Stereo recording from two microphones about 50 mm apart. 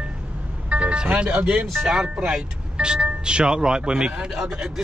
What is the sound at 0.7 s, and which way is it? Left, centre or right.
Music, right.